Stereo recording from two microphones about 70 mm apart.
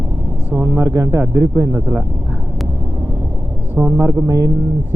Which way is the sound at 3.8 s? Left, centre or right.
Right.